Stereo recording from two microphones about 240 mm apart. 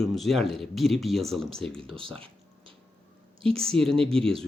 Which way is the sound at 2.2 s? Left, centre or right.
Right.